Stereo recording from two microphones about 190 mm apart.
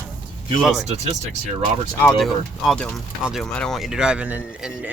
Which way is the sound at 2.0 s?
5° left (ahead or behind).